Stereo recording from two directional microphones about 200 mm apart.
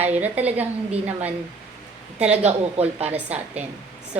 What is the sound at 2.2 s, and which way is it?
A woman's voice, 35° right (ahead or behind).